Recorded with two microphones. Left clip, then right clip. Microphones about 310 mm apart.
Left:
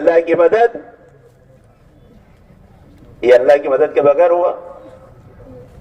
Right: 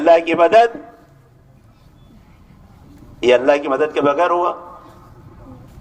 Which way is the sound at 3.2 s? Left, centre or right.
Right.